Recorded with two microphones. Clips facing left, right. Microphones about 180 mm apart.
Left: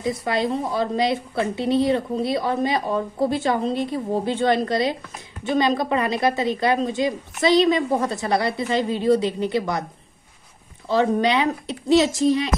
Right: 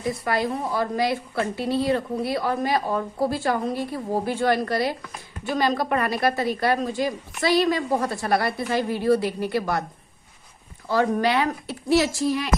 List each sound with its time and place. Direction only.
0.0 s a woman's voice: 20° left (ahead or behind)
10.9 s a woman's voice: 20° left (ahead or behind)